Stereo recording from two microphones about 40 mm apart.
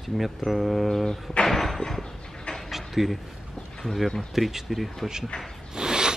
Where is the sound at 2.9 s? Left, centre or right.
Centre.